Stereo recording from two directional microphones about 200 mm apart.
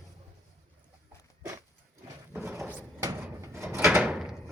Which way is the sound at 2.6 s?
10° right (ahead or behind).